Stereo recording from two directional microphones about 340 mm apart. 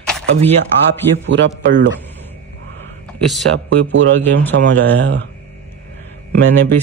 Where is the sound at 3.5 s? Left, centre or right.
Right.